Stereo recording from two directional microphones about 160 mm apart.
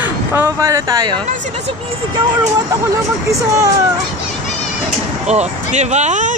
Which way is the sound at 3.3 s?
20° right (ahead or behind).